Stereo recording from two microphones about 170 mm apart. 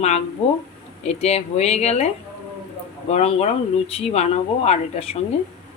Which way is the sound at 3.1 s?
35° left (ahead or behind).